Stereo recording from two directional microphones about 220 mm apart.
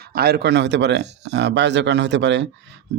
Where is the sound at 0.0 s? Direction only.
45° right (ahead or behind).